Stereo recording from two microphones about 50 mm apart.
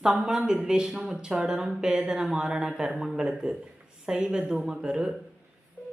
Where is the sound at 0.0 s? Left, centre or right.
Centre.